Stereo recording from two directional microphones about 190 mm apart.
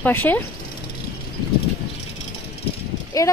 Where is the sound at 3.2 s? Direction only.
20° left (ahead or behind).